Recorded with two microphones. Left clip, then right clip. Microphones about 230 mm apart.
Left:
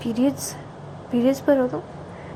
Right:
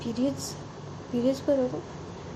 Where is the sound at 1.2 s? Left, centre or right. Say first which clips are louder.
Left 6 dB; centre.